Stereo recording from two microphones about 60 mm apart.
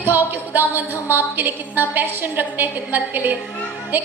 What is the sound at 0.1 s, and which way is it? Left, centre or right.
A woman's voice, right.